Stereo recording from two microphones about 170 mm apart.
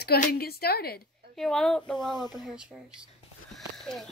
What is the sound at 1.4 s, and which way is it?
Speech, centre (ahead or behind).